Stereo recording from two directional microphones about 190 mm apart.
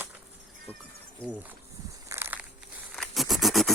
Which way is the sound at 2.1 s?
10° right (ahead or behind).